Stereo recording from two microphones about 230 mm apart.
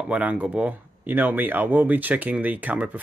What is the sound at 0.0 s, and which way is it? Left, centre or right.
Speech, centre.